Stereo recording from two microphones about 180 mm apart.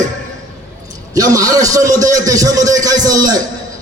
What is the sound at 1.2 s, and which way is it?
A man's voice, 20° right (ahead or behind).